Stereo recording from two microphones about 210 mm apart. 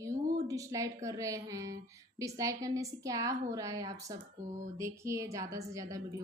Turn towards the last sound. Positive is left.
turn(degrees=-15)  # may be behind; listen again after turning